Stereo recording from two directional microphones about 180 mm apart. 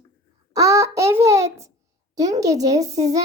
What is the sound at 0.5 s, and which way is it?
A child's voice, 15° right (ahead or behind).